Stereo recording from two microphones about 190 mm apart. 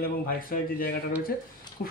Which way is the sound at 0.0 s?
50° left (ahead or behind).